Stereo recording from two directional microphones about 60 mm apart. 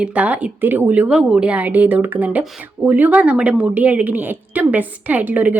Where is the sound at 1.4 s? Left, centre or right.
Right.